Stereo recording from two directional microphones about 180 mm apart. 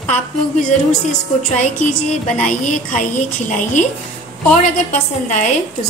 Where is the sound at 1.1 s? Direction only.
40° left (ahead or behind).